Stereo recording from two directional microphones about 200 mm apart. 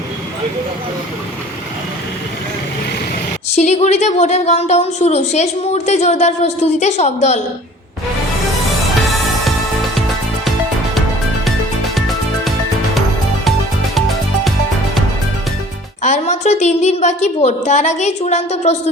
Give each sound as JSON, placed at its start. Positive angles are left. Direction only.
{"t": 3.5, "sound": "a woman's voice", "side_deg": 35}
{"t": 11.9, "sound": "music", "side_deg": 0}
{"t": 16.0, "sound": "a woman's voice", "side_deg": 35}